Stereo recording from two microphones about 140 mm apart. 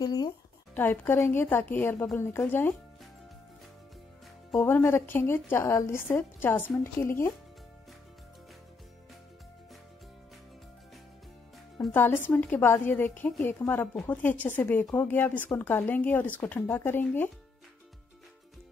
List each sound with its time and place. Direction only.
0.0 s music: 30° left (ahead or behind)
0.7 s speech: 15° left (ahead or behind)
4.6 s speech: 15° left (ahead or behind)
11.9 s speech: 15° left (ahead or behind)